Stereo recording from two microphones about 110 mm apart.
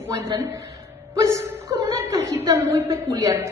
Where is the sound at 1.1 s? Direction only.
30° right (ahead or behind).